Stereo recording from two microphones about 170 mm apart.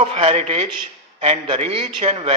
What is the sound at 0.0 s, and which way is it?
A man's voice, 35° right (ahead or behind).